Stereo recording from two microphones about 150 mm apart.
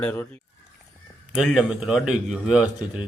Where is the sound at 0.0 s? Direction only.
15° left (ahead or behind).